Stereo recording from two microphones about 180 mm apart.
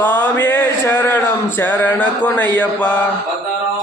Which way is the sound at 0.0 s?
10° left (ahead or behind).